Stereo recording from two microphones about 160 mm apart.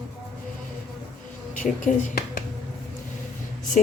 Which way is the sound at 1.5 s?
55° left (ahead or behind).